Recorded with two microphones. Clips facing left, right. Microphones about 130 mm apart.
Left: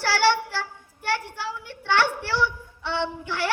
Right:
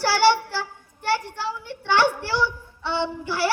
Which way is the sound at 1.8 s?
15° right (ahead or behind).